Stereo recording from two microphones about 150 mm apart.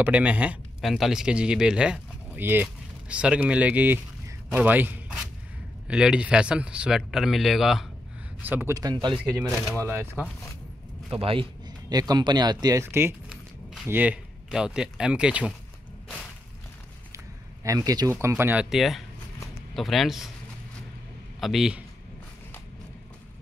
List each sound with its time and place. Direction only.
0.0 s speech: 10° right (ahead or behind)
8.4 s speech: 10° right (ahead or behind)
8.7 s speech: 25° right (ahead or behind)
9.8 s speech: 15° right (ahead or behind)
11.1 s a man's voice: 40° right (ahead or behind)
11.9 s speech: 25° right (ahead or behind); by 15.5 s 5° right (ahead or behind)
17.6 s speech: 25° right (ahead or behind); by 20.2 s centre (ahead or behind)
21.4 s speech: centre (ahead or behind)